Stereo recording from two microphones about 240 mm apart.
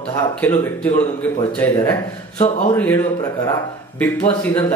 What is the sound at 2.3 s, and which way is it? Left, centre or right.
Speech, left.